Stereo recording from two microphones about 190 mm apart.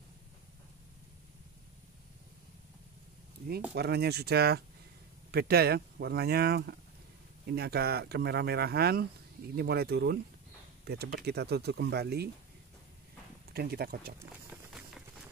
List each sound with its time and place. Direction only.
3.7 s speech: 60° right (ahead or behind)
13.5 s speech: 55° right (ahead or behind)
14.5 s a sound: centre (ahead or behind)